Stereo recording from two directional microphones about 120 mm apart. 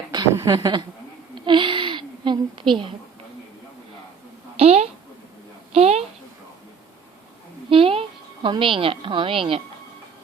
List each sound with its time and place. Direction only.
0.3 s speech: 35° right (ahead or behind)
1.4 s a sound: 45° right (ahead or behind)
4.5 s a woman's voice: 60° right (ahead or behind)
7.7 s a woman's voice: 50° right (ahead or behind)